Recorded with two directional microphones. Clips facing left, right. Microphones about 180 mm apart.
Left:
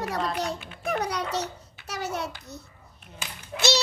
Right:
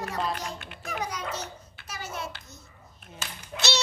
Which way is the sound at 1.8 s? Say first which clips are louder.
Left 6 dB; 70° left (ahead or behind).